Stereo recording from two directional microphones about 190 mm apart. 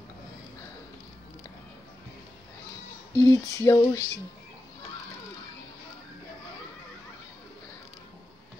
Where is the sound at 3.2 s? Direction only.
15° left (ahead or behind).